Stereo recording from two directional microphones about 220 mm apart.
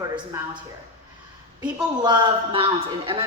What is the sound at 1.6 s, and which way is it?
A woman's voice, 20° right (ahead or behind).